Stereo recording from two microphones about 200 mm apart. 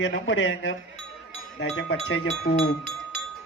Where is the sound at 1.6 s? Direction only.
70° left (ahead or behind).